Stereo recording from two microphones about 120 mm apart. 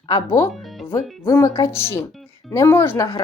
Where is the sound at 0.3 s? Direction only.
20° left (ahead or behind).